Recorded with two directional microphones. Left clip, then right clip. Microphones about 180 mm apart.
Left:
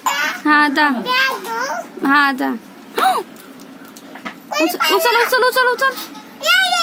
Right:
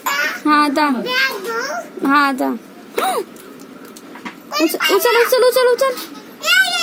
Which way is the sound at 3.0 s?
10° left (ahead or behind).